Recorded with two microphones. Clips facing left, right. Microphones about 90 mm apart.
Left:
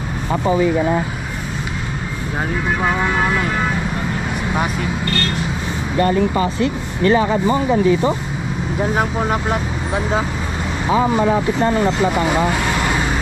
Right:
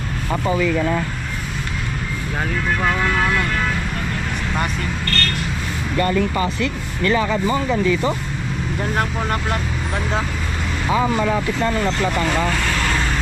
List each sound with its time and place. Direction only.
0.3 s speech: 25° left (ahead or behind)
2.8 s speech: 15° left (ahead or behind)
5.9 s speech: 25° left (ahead or behind)
8.7 s speech: 5° left (ahead or behind)
10.9 s speech: 20° left (ahead or behind)
12.0 s speech: 10° left (ahead or behind)